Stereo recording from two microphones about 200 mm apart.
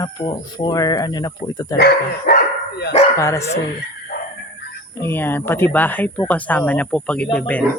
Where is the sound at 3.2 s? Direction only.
15° left (ahead or behind).